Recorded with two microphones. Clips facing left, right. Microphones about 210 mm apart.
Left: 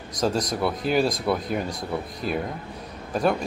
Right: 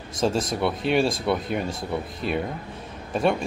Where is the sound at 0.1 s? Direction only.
25° right (ahead or behind).